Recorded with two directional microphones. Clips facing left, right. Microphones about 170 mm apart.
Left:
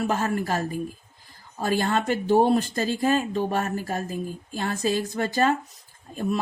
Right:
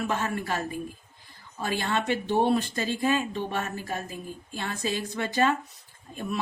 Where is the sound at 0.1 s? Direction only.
40° left (ahead or behind).